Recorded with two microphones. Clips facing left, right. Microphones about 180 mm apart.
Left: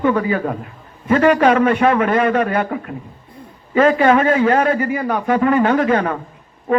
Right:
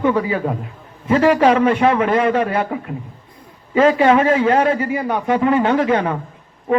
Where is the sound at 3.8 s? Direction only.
25° right (ahead or behind).